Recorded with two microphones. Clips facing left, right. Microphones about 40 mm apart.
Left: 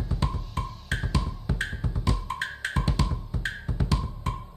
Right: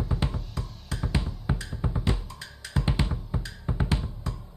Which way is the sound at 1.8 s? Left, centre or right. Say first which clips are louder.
Right 1 dB; right.